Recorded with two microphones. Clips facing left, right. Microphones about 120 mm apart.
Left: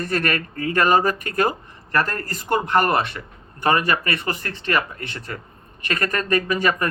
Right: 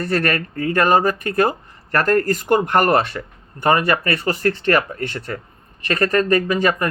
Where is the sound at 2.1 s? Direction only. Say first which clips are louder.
Right 7 dB; 50° right (ahead or behind).